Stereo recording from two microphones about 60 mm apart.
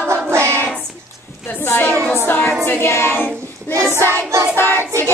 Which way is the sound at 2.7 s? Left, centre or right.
Left.